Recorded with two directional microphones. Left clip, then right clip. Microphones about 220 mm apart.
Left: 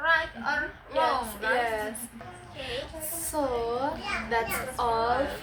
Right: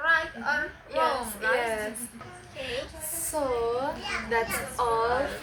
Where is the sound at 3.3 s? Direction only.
15° left (ahead or behind).